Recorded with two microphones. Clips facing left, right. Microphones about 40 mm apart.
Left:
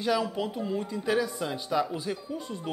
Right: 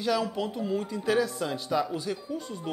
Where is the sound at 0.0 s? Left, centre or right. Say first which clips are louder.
Even; centre.